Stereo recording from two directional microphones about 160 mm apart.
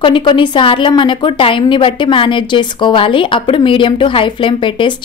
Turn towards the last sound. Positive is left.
turn(degrees=30)  # may be behind; listen again after turning